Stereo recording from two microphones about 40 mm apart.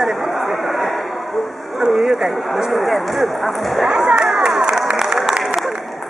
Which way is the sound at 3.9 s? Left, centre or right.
Right.